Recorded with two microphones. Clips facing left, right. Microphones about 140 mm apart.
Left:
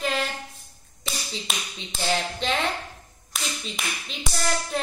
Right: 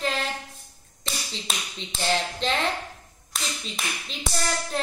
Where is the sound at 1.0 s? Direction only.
5° left (ahead or behind).